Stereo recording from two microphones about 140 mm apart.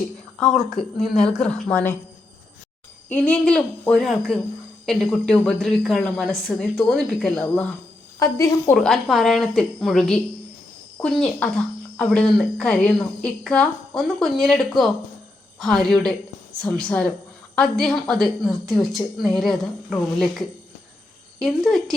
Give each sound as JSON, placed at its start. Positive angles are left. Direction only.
{"t": 0.3, "sound": "speech", "side_deg": 5}
{"t": 3.1, "sound": "a woman's voice", "side_deg": 10}
{"t": 8.2, "sound": "speech", "side_deg": 20}
{"t": 8.7, "sound": "a woman's voice", "side_deg": 5}